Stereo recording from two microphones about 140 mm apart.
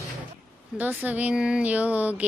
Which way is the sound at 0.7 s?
10° right (ahead or behind).